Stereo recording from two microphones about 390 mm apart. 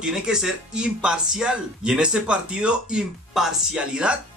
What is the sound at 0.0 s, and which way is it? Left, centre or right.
Speech, centre.